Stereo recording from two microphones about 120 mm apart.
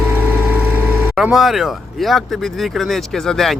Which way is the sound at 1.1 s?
5° right (ahead or behind).